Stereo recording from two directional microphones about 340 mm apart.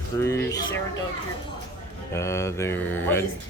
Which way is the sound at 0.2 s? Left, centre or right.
Centre.